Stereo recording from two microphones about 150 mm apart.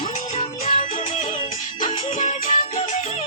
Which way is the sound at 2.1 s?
55° left (ahead or behind).